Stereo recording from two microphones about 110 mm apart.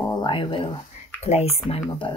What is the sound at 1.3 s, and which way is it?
Speech, 90° left.